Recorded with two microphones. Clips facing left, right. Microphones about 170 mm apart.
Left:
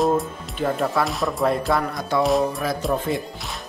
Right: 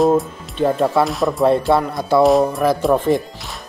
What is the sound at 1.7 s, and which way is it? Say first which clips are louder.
Music: right 6 dB; 25° right (ahead or behind).